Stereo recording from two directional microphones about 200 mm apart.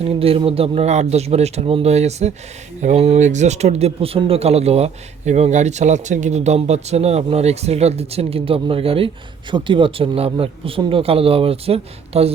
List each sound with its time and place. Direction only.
0.2 s speech: 30° right (ahead or behind)